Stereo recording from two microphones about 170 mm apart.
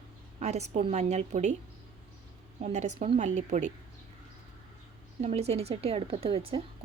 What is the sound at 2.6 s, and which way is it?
A woman's voice, 40° right (ahead or behind).